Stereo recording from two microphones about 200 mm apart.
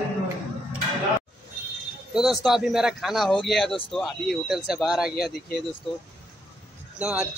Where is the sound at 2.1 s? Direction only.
Centre (ahead or behind).